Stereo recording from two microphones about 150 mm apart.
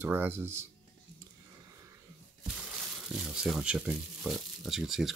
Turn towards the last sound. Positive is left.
turn(degrees=0)  # may be behind; listen again after turning